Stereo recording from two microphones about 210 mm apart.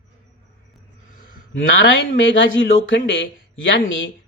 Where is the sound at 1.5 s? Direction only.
65° left (ahead or behind).